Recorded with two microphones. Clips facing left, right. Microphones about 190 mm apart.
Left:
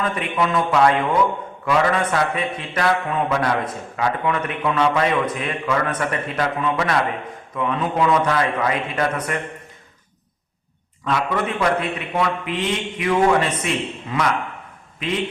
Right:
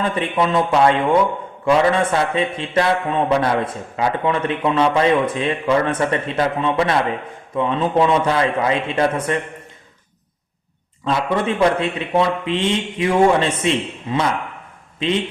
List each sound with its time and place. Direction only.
0.0 s a man's voice: 30° right (ahead or behind)
11.0 s a man's voice: 25° right (ahead or behind)